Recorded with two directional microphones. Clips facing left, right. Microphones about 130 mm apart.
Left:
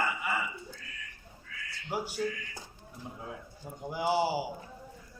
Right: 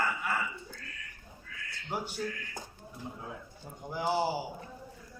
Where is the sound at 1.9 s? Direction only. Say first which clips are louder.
Left 2 dB; 5° left (ahead or behind).